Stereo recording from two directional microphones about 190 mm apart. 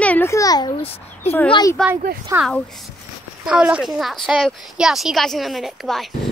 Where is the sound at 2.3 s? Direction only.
15° right (ahead or behind).